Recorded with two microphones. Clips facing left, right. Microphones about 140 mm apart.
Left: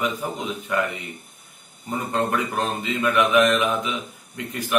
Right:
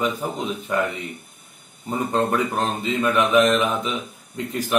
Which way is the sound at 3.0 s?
30° right (ahead or behind).